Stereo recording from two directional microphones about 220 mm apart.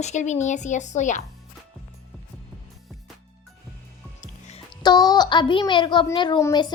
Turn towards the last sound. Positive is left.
turn(degrees=15)  # may be behind; listen again after turning